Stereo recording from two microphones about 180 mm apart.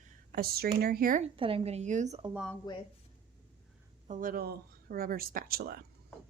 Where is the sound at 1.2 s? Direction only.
30° right (ahead or behind).